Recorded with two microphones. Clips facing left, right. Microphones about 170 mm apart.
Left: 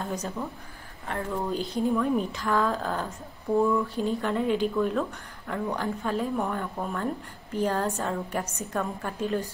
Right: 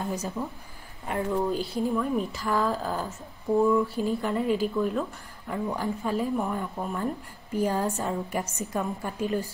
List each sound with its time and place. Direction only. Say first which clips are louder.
0.4 s a woman's voice: right 1 dB; 10° right (ahead or behind)